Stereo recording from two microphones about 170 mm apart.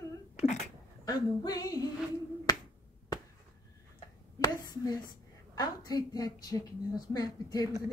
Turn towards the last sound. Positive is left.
turn(degrees=20)  # may be behind; listen again after turning